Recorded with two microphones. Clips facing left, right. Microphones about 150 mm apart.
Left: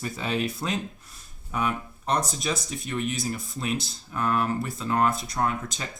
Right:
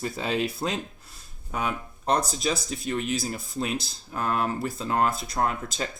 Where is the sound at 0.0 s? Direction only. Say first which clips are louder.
Right 1 dB; 30° right (ahead or behind).